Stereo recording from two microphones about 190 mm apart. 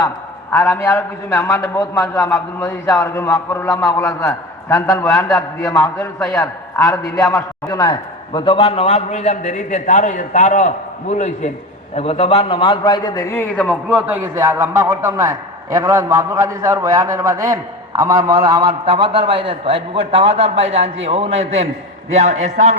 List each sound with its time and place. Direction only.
0.5 s a man's voice: 15° left (ahead or behind)
13.9 s a man's voice: 10° right (ahead or behind); by 22.7 s 40° right (ahead or behind)